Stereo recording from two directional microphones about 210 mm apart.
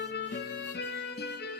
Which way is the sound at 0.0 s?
55° left (ahead or behind).